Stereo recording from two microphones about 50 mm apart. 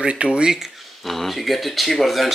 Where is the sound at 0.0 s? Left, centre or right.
Right.